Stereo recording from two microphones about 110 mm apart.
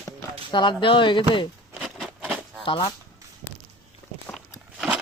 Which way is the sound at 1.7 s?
5° right (ahead or behind).